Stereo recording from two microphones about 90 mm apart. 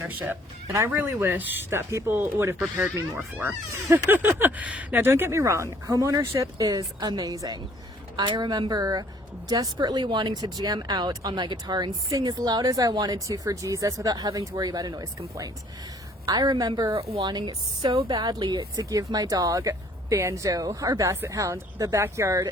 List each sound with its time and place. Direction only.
0.0 s a woman's voice: 25° right (ahead or behind); by 18.0 s 60° right (ahead or behind)
18.1 s speech: 45° right (ahead or behind)